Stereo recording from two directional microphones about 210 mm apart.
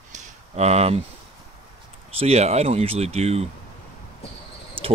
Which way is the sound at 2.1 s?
30° right (ahead or behind).